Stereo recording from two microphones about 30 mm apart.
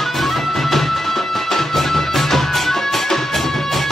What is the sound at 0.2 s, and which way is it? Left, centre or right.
Music, centre.